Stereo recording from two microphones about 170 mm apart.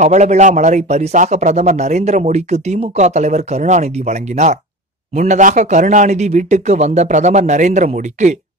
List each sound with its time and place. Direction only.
0.0 s a man's voice: 45° right (ahead or behind)